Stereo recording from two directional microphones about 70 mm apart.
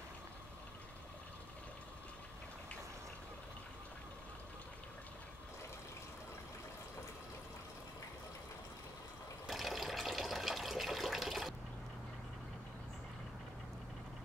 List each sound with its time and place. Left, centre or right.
9.5 s water: centre